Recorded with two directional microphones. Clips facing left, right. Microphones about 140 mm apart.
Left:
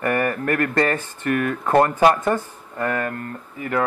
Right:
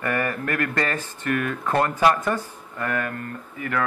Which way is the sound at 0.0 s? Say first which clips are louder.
Left 4 dB; 35° left (ahead or behind).